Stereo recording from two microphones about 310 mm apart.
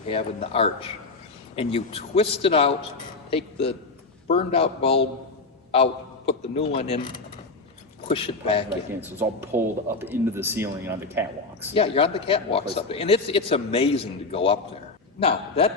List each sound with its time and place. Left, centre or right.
0.1 s a man's voice: centre
9.0 s speech: centre
11.7 s a man's voice: centre